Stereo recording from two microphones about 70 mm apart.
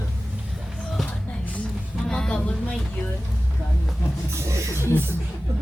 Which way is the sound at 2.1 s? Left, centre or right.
Centre.